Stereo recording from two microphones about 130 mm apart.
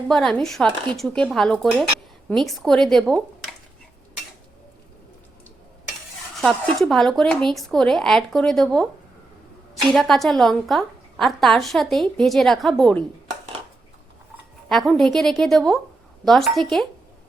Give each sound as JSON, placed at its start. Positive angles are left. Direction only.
{"t": 0.1, "sound": "a woman's voice", "side_deg": 5}
{"t": 6.4, "sound": "a woman's voice", "side_deg": 0}
{"t": 9.9, "sound": "a woman's voice", "side_deg": 0}
{"t": 14.7, "sound": "a woman's voice", "side_deg": 0}